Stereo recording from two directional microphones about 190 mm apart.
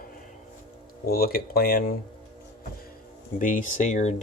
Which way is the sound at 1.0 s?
50° left (ahead or behind).